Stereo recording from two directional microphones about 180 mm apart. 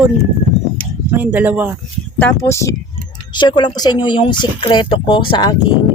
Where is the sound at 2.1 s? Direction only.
10° left (ahead or behind).